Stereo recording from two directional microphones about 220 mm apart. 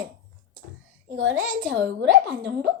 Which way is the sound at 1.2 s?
60° right (ahead or behind).